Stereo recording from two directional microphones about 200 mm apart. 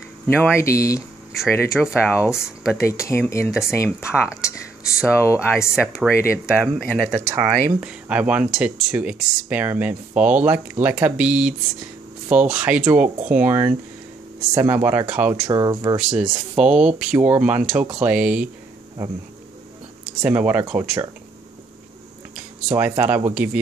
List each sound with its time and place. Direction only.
0.4 s speech: 15° left (ahead or behind)
1.3 s speech: centre (ahead or behind)
2.0 s speech: 15° left (ahead or behind)
4.0 s speech: 5° right (ahead or behind)
4.4 s a sound: 15° left (ahead or behind)
5.2 s speech: 15° left (ahead or behind)
6.6 s speech: 5° right (ahead or behind)
15.5 s speech: 20° right (ahead or behind)
16.2 s speech: 5° right (ahead or behind)
20.2 s speech: 5° right (ahead or behind)
22.3 s speech: 5° right (ahead or behind)